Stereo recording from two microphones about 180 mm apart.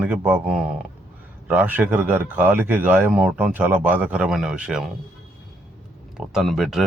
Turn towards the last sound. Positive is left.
turn(degrees=0)  # may be behind; listen again after turning